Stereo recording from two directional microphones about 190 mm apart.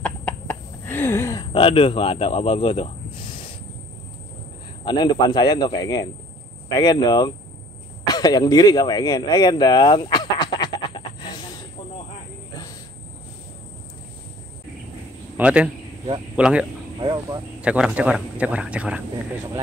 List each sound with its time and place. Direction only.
0.0 s a sound: 10° left (ahead or behind)
1.5 s speech: 25° left (ahead or behind)
4.8 s speech: 20° left (ahead or behind)
8.1 s a sound: 20° left (ahead or behind)
15.3 s a man's voice: 5° right (ahead or behind)
17.0 s speech: 20° right (ahead or behind)
17.6 s a man's voice: 5° right (ahead or behind)